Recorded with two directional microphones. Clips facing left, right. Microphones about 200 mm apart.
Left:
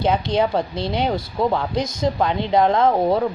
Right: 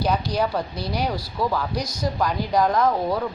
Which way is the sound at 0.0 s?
25° left (ahead or behind).